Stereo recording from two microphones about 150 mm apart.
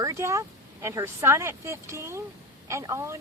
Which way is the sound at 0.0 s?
20° right (ahead or behind).